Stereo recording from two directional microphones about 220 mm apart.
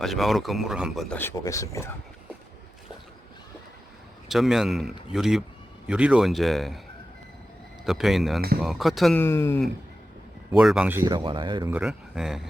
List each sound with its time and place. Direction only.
0.0 s speech: centre (ahead or behind)
1.2 s speech: 10° left (ahead or behind)
4.3 s speech: centre (ahead or behind)
7.9 s speech: centre (ahead or behind)
9.2 s speech: 10° left (ahead or behind)
10.5 s speech: centre (ahead or behind)
11.0 s speech: 20° right (ahead or behind)
11.7 s speech: 5° right (ahead or behind)